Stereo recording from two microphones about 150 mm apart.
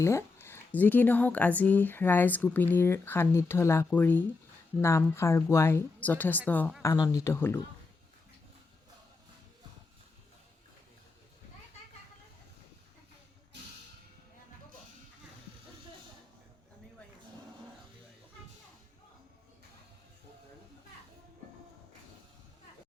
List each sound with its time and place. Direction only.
0.0 s speech: 20° left (ahead or behind)
6.8 s speech: 25° left (ahead or behind)